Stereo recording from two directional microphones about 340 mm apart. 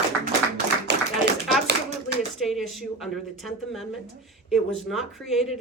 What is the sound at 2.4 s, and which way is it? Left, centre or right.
Speech, centre.